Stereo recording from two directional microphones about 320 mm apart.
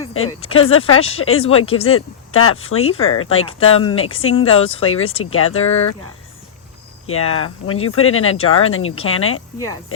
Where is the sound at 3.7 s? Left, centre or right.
Centre.